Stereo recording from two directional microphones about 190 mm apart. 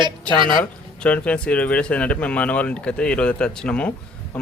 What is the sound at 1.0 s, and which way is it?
Speech, 5° left (ahead or behind).